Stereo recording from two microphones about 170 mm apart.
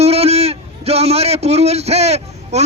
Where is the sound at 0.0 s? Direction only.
35° right (ahead or behind).